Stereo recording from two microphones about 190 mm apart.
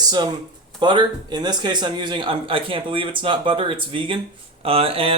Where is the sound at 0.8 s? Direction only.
25° right (ahead or behind).